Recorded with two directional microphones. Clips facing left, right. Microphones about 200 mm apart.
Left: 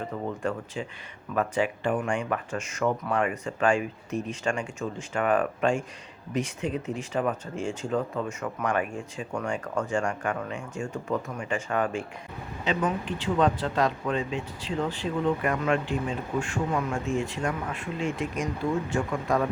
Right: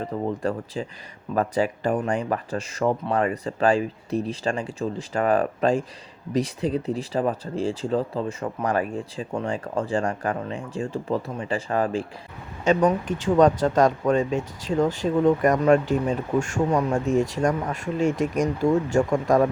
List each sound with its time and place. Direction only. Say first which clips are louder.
0.0 s speech: right 4 dB; 35° right (ahead or behind)
12.6 s speech: right 8 dB; 45° right (ahead or behind)